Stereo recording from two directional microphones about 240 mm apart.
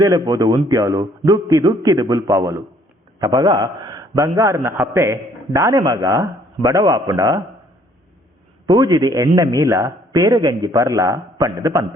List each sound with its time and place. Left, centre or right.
0.0 s a man's voice: centre
8.6 s a man's voice: centre